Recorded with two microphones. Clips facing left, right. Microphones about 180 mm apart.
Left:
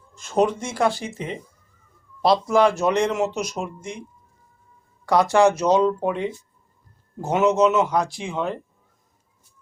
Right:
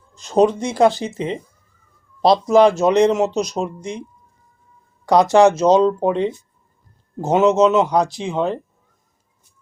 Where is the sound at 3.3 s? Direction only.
35° right (ahead or behind).